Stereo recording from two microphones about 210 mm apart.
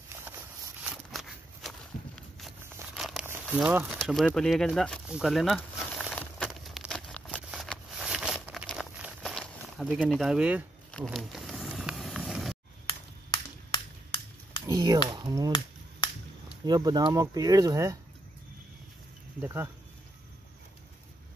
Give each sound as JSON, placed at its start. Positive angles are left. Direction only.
{"t": 0.8, "sound": "walk", "side_deg": 0}
{"t": 3.0, "sound": "crumpling", "side_deg": 0}
{"t": 3.4, "sound": "a sound", "side_deg": -5}
{"t": 11.1, "sound": "vehicle", "side_deg": 0}
{"t": 14.7, "sound": "a sound", "side_deg": -20}
{"t": 15.0, "sound": "speech", "side_deg": -20}
{"t": 16.6, "sound": "speech", "side_deg": -20}
{"t": 19.4, "sound": "speech", "side_deg": -10}